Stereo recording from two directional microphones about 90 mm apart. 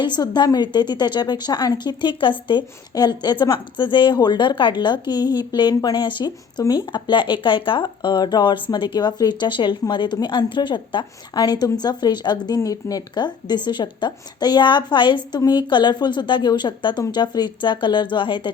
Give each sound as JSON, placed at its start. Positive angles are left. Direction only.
{"t": 0.2, "sound": "a woman's voice", "side_deg": 50}
{"t": 2.9, "sound": "a woman's voice", "side_deg": 50}
{"t": 12.5, "sound": "a woman's voice", "side_deg": 45}